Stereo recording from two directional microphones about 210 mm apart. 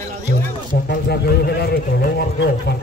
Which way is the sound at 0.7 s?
50° left (ahead or behind).